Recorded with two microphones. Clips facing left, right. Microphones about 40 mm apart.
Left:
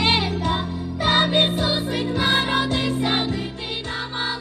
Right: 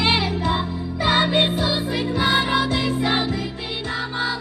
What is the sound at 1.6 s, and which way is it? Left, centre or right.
Music, left.